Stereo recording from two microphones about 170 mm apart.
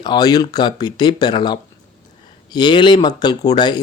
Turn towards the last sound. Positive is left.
turn(degrees=25)  # may be behind; listen again after turning